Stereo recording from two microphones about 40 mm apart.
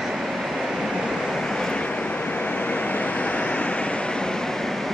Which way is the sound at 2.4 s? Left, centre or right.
Left.